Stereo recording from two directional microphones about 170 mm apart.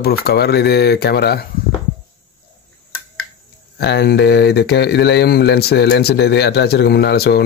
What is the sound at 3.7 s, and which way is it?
Speech, 75° left (ahead or behind).